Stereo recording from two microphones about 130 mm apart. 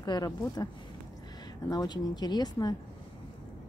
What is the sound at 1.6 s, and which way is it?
Speech, 30° left (ahead or behind).